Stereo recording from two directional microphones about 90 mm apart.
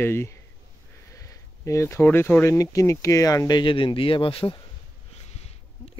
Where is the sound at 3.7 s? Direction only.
70° left (ahead or behind).